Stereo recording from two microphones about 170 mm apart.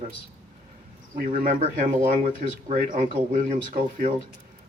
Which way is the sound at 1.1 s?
55° right (ahead or behind).